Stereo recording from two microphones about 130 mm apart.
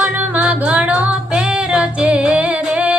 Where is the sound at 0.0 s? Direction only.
10° right (ahead or behind).